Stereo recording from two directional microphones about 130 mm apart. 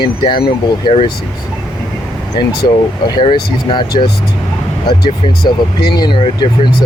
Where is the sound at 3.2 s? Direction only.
35° left (ahead or behind).